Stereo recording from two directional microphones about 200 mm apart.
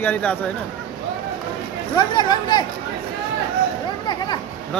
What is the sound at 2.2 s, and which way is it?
Speech, 20° left (ahead or behind).